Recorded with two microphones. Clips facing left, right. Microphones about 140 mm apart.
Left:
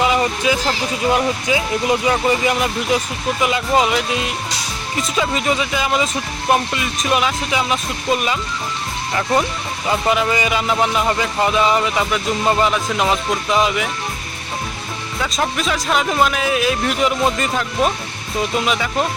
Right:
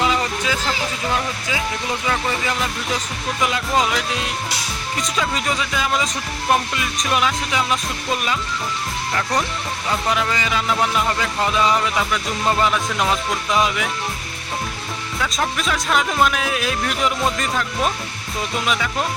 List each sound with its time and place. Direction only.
0.0 s a sound: 10° left (ahead or behind)
1.1 s speech: 20° left (ahead or behind)
3.4 s speech: 5° left (ahead or behind)
9.4 s speech: 10° left (ahead or behind)
15.2 s speech: 5° left (ahead or behind)